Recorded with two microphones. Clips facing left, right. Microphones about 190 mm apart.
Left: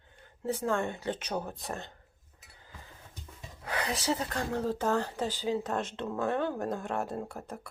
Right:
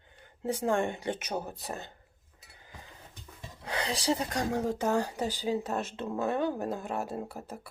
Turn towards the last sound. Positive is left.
turn(degrees=-5)  # may be behind; listen again after turning